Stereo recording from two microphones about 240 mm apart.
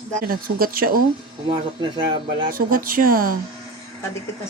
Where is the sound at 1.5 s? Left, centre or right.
Centre.